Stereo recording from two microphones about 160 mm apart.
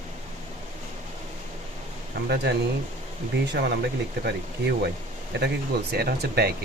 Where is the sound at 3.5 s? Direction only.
90° right.